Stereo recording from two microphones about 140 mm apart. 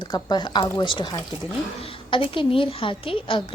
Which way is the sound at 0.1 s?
30° left (ahead or behind).